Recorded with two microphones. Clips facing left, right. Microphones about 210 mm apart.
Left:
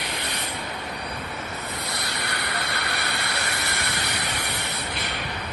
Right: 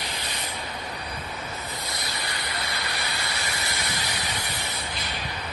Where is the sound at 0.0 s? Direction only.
65° left (ahead or behind).